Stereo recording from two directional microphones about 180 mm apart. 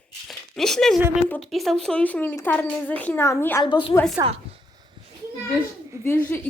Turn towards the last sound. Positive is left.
turn(degrees=10)  # may be behind; listen again after turning